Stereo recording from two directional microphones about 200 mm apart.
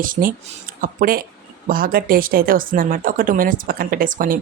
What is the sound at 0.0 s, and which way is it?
Speech, 45° right (ahead or behind).